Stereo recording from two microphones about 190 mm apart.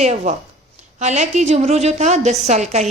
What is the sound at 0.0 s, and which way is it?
A woman's voice, 35° right (ahead or behind).